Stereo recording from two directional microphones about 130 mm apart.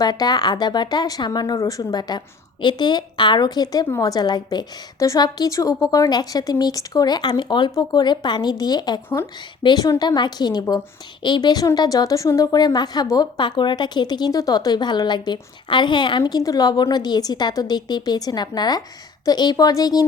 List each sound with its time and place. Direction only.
0.0 s a woman's voice: 30° left (ahead or behind)